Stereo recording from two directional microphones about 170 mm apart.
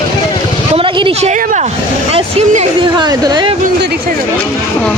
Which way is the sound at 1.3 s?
50° right (ahead or behind).